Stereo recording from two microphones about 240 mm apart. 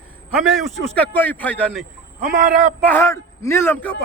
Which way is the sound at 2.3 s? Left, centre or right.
Right.